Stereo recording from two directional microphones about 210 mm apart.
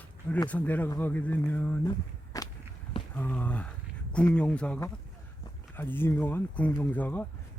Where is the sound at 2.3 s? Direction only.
15° left (ahead or behind).